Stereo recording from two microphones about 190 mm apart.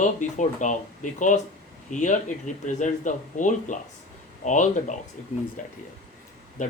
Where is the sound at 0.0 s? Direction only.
40° left (ahead or behind).